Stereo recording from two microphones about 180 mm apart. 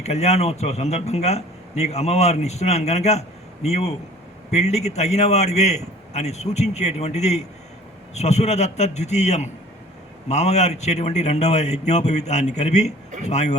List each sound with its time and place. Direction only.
0.0 s a man's voice: 35° left (ahead or behind)